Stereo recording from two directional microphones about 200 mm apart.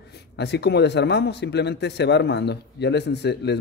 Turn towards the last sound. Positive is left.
turn(degrees=55)  # may be behind; listen again after turning